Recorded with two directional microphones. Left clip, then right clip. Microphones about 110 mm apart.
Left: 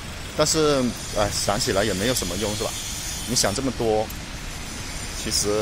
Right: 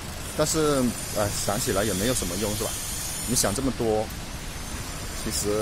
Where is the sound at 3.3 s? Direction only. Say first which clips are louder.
Left 3 dB; 25° right (ahead or behind).